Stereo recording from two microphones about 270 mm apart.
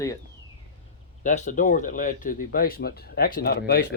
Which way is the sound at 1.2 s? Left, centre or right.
Left.